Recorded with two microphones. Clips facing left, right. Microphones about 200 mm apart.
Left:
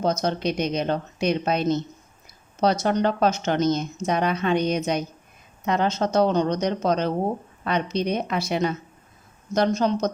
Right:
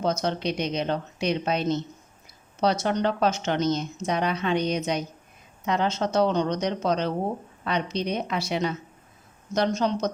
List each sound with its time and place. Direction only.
0.0 s a woman's voice: 40° left (ahead or behind)
2.8 s a woman's voice: 45° left (ahead or behind)